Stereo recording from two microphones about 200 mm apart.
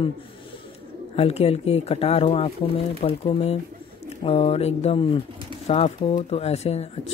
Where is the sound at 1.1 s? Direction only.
30° left (ahead or behind).